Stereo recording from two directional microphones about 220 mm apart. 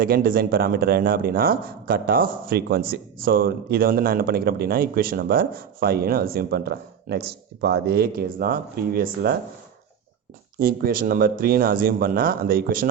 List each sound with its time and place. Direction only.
0.0 s speech: 40° right (ahead or behind)
10.6 s speech: 40° right (ahead or behind)